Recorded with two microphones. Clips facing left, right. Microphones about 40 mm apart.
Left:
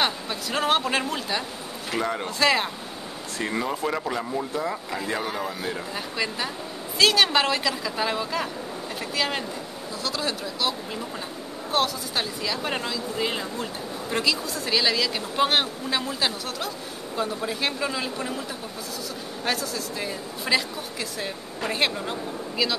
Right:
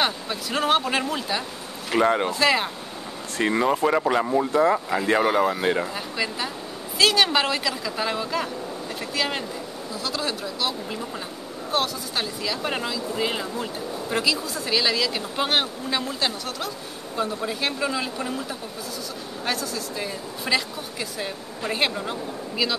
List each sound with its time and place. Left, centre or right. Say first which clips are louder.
0.0 s speech: right 1 dB; centre
2.0 s speech: right 8 dB; right
2.3 s speech: right 1 dB; centre
3.4 s speech: right 6 dB; right
3.8 s speech: right 6 dB; centre
4.5 s speech: right 8 dB; right
5.9 s speech: right 1 dB; centre
19.4 s speech: even; centre